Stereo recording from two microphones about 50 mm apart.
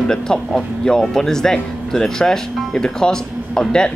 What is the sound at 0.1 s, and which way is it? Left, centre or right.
Speech, centre.